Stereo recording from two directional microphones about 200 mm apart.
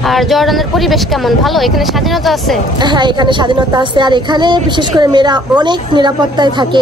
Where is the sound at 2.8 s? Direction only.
20° right (ahead or behind).